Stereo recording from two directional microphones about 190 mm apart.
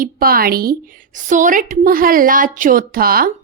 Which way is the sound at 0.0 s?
50° right (ahead or behind).